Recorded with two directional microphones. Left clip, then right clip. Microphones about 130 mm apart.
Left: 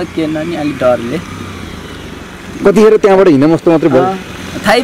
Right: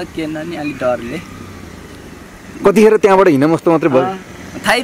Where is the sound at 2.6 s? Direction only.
35° right (ahead or behind).